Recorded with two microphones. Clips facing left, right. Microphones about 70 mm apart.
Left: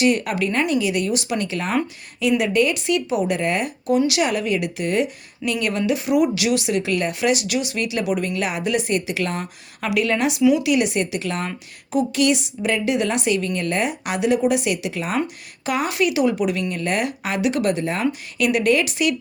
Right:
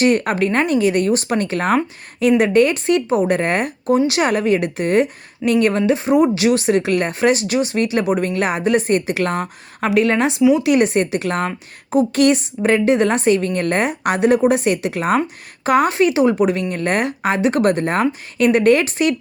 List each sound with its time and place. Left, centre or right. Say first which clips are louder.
0.0 s speech: right 4 dB; right